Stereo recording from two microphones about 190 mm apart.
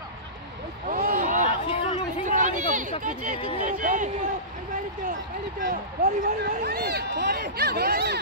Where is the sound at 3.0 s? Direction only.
45° right (ahead or behind).